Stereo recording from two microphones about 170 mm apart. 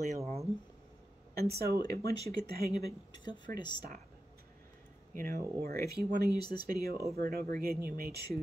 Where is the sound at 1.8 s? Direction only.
20° left (ahead or behind).